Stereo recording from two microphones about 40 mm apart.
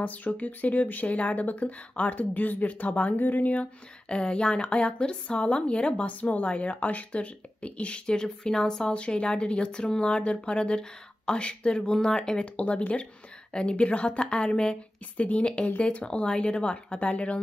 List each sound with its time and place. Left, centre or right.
0.0 s a woman's voice: left
4.1 s speech: left
6.0 s a woman's voice: left
15.8 s speech: left